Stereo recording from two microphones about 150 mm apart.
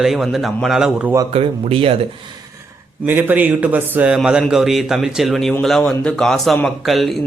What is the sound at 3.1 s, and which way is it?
Speech, 15° right (ahead or behind).